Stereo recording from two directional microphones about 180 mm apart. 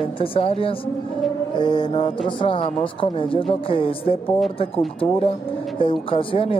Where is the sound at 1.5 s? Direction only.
25° left (ahead or behind).